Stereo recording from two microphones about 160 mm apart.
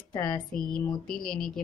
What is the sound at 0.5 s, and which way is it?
A woman's voice, 5° left (ahead or behind).